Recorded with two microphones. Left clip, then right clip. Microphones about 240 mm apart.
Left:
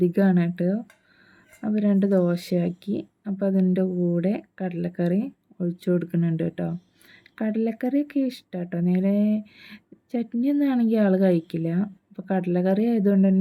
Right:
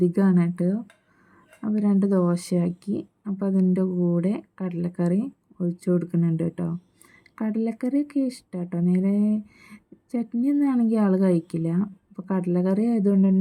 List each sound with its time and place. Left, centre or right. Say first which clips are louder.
0.0 s speech: left 1 dB; centre
2.0 s speech: left 2 dB; centre
2.3 s speech: left 1 dB; right